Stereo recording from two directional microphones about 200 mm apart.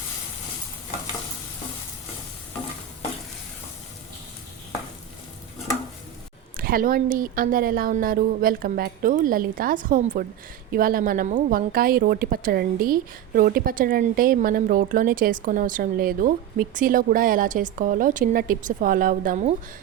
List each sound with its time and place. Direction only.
6.6 s a woman's voice: 45° right (ahead or behind)